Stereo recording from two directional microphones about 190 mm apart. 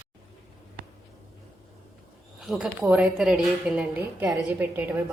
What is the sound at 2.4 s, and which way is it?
A woman's voice, 5° right (ahead or behind).